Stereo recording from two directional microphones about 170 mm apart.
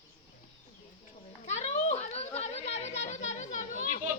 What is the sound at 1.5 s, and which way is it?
Children playing, 40° left (ahead or behind).